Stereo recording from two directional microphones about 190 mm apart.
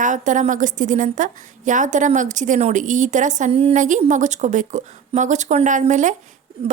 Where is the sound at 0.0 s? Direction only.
40° right (ahead or behind).